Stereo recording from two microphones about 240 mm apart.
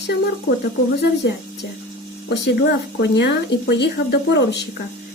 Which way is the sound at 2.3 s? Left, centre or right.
Left.